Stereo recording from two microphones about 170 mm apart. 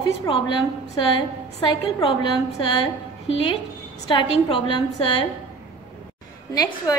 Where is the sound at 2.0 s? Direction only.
30° left (ahead or behind).